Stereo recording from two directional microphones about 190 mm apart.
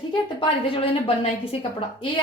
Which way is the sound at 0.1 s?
25° left (ahead or behind).